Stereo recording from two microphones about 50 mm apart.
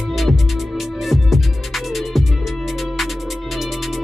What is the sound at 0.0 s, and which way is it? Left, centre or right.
Music, centre.